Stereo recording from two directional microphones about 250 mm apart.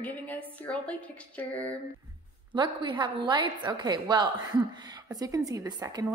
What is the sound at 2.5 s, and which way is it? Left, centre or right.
A woman's voice, centre.